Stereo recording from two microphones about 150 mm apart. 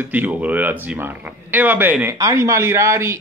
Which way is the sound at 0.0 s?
10° right (ahead or behind).